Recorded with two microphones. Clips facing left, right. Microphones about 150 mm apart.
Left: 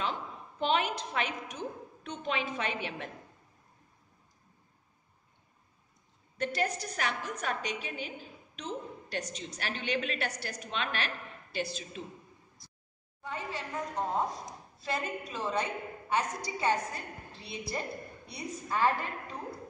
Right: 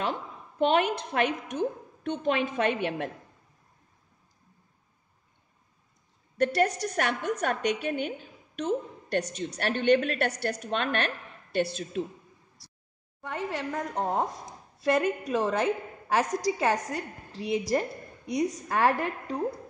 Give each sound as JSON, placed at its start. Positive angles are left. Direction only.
{"t": 0.0, "sound": "a woman's voice", "side_deg": -55}
{"t": 6.3, "sound": "a woman's voice", "side_deg": -65}
{"t": 13.2, "sound": "a woman's voice", "side_deg": -80}
{"t": 14.8, "sound": "a woman's voice", "side_deg": -75}